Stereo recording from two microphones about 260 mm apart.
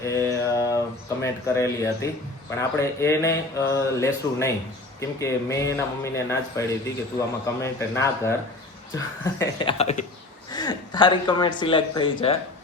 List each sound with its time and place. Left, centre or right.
0.0 s mantra: centre
1.2 s speech: centre
9.4 s speech: centre